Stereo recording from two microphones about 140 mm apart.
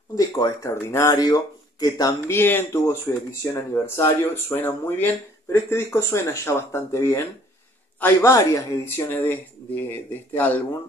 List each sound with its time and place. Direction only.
0.1 s speech: 25° left (ahead or behind)